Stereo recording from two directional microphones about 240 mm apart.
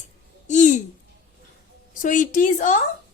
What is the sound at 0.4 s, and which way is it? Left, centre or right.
Babbling, left.